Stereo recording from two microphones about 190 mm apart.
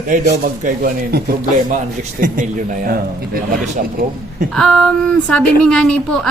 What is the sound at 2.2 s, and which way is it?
A man's voice, 45° right (ahead or behind).